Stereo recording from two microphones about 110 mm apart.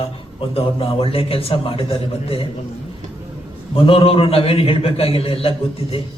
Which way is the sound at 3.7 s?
55° left (ahead or behind).